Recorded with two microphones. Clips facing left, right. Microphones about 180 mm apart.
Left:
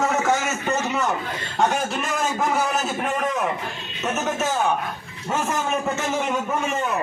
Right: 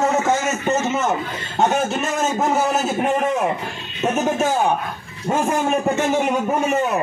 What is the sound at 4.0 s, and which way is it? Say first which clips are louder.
A man's voice: right 5 dB; 30° right (ahead or behind).